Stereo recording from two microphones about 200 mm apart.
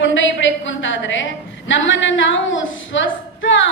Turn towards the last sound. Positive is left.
turn(degrees=70)  # may be behind; listen again after turning